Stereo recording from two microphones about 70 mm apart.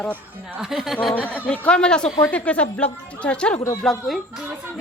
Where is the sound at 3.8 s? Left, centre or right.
Centre.